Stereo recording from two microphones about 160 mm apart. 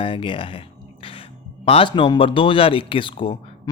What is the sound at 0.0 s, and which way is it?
Speech, 30° left (ahead or behind).